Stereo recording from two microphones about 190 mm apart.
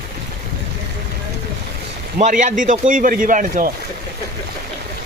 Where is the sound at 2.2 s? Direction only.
40° right (ahead or behind).